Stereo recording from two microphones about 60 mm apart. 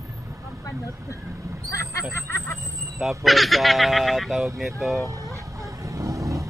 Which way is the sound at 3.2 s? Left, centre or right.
Centre.